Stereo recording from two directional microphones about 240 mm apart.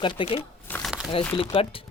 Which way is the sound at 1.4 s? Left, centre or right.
Left.